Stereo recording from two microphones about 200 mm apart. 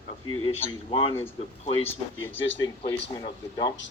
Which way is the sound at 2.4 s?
70° left (ahead or behind).